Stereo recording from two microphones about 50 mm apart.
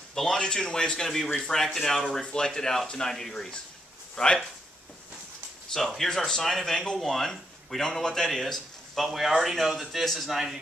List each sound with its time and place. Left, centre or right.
0.1 s speech: centre
5.7 s speech: centre